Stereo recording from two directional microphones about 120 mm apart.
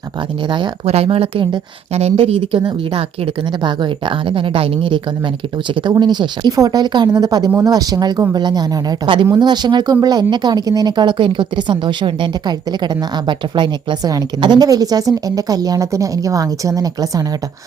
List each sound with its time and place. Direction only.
0.9 s speech: 55° right (ahead or behind)
1.9 s speech: 60° right (ahead or behind)
2.6 s speech: 40° right (ahead or behind)
4.3 s speech: 45° right (ahead or behind)